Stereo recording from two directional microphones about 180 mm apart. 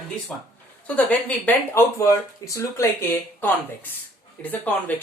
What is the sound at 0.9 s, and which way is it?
Speech, 10° left (ahead or behind).